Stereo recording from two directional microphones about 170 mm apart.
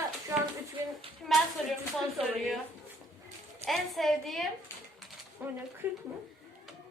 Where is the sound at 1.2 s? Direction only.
Centre (ahead or behind).